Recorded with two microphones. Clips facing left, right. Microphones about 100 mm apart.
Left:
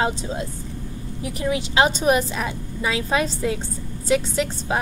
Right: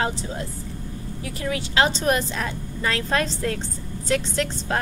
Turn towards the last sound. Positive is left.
turn(degrees=10)  # may be behind; listen again after turning